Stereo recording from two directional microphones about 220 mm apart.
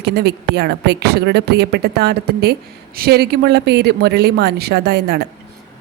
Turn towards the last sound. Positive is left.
turn(degrees=-50)  # may be behind; listen again after turning